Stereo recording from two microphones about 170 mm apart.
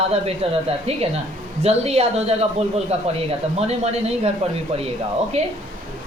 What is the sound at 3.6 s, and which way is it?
Speech, 40° right (ahead or behind).